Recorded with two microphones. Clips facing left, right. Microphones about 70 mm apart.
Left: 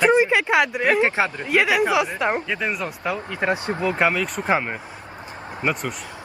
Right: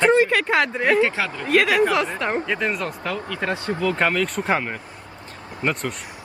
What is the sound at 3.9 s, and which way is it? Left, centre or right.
Speech, centre.